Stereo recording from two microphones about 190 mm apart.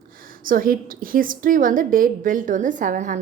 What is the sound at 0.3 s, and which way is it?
A woman's voice, 50° right (ahead or behind).